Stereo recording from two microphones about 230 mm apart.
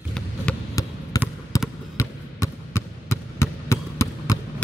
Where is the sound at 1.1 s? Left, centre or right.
Centre.